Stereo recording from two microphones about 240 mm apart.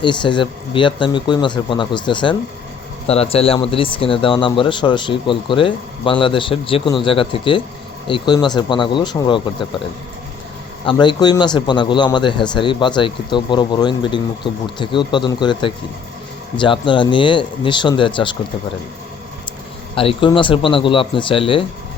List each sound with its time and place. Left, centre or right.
0.0 s speech: centre
10.8 s speech: centre
20.0 s speech: left